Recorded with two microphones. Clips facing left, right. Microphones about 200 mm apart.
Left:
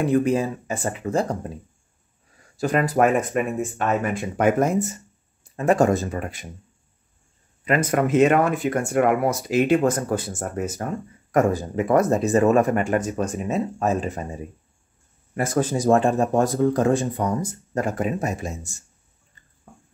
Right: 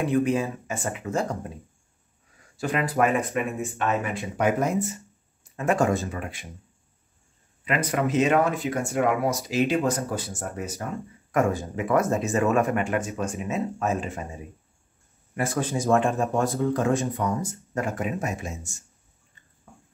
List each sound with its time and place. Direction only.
0.1 s speech: 40° left (ahead or behind)
2.5 s speech: 45° left (ahead or behind)
7.6 s speech: 45° left (ahead or behind)
11.3 s speech: 35° left (ahead or behind)
15.3 s speech: 40° left (ahead or behind)